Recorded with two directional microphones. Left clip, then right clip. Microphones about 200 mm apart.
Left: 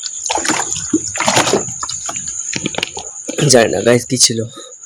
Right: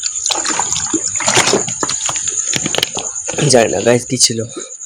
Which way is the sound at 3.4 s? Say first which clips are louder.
Left 1 dB; 5° left (ahead or behind).